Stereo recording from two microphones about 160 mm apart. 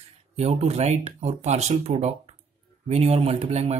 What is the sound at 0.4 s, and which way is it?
Speech, 40° right (ahead or behind).